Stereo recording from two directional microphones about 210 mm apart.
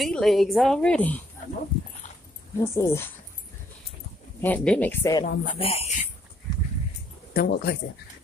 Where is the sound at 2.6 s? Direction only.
15° left (ahead or behind).